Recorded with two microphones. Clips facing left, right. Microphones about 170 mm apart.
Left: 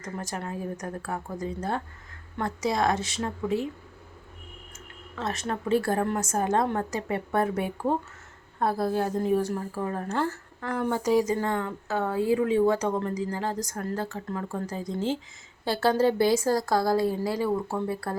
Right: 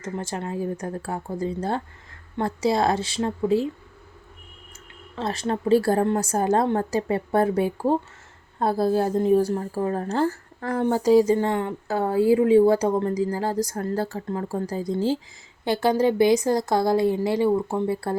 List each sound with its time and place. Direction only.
0.0 s speech: 25° right (ahead or behind)
5.1 s speech: 30° right (ahead or behind)
15.6 s speech: 15° right (ahead or behind)